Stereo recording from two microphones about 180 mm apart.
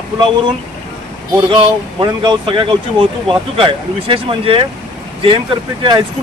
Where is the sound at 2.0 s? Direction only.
25° right (ahead or behind).